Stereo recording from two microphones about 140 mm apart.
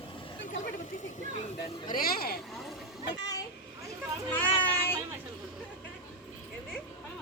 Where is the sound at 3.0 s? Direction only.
25° left (ahead or behind).